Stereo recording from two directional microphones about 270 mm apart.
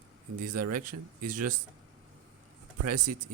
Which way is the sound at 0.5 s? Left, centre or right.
Right.